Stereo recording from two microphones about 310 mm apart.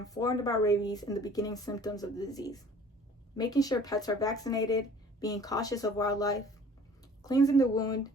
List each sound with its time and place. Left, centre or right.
0.0 s speech: centre